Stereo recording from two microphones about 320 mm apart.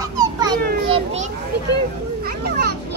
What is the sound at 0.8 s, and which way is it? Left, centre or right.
Children playing, right.